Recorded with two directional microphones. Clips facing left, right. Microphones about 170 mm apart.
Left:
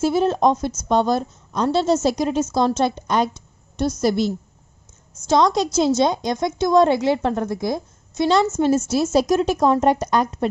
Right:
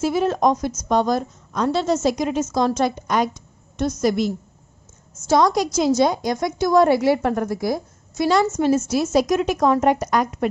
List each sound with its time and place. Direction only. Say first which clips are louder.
0.0 s a woman's voice: left 1 dB; 30° left (ahead or behind)
5.3 s a woman's voice: even; 20° left (ahead or behind)